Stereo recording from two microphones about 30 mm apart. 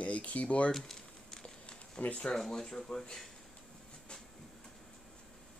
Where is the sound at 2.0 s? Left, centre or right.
Left.